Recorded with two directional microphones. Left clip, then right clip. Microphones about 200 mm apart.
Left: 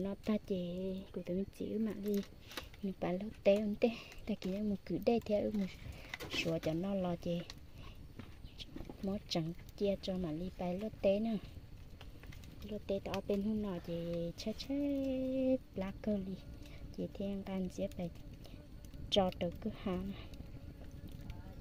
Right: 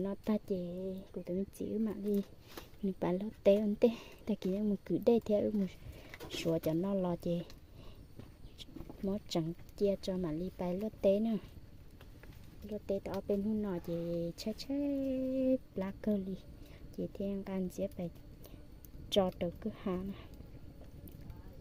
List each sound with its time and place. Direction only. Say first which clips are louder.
0.0 s speech: right 2 dB; 10° right (ahead or behind)
2.8 s speech: right 4 dB; 20° right (ahead or behind)
9.0 s speech: right 3 dB; 15° right (ahead or behind)
12.9 s speech: right 2 dB; 10° right (ahead or behind)